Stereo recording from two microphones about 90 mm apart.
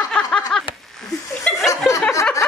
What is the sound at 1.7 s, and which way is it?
Chuckle, 35° left (ahead or behind).